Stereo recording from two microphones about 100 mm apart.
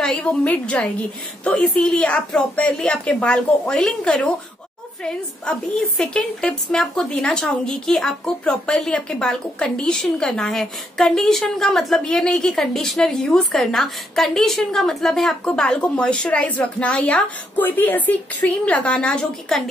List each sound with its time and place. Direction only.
0.0 s a woman's voice: 10° left (ahead or behind)